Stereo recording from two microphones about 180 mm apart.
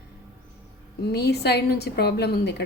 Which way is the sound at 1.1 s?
65° left (ahead or behind).